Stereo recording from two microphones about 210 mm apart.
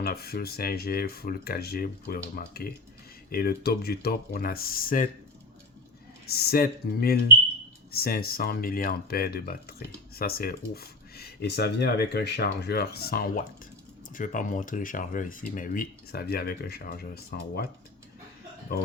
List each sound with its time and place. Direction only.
0.0 s speech: 50° left (ahead or behind)
6.3 s speech: 50° left (ahead or behind)